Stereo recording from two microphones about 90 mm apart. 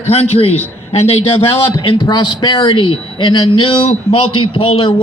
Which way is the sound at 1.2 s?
90° left.